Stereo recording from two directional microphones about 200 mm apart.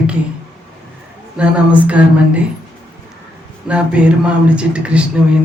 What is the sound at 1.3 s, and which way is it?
Speech, 5° right (ahead or behind).